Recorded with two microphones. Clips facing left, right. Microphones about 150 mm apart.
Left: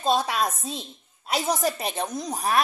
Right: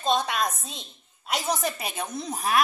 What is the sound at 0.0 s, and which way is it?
Speech, 5° left (ahead or behind).